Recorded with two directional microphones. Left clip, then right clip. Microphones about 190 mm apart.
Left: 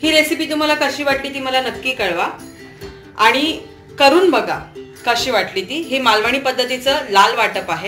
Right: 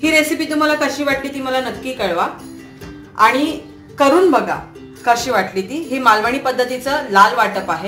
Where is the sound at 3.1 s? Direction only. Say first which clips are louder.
Right 1 dB; 40° right (ahead or behind).